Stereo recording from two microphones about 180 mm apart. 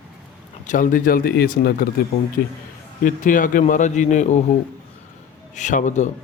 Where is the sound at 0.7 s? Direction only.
45° left (ahead or behind).